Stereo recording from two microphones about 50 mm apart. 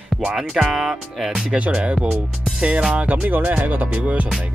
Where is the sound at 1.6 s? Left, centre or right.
Right.